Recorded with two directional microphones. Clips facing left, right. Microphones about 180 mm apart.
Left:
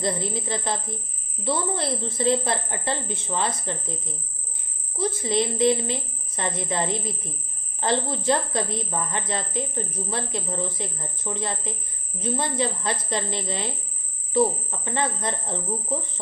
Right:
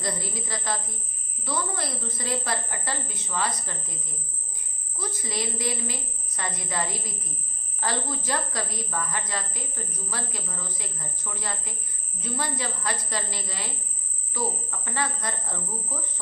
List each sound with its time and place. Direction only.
0.0 s a woman's voice: 25° left (ahead or behind)